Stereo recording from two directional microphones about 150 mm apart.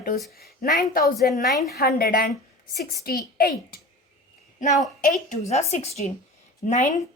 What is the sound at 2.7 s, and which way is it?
Speech, 90° left.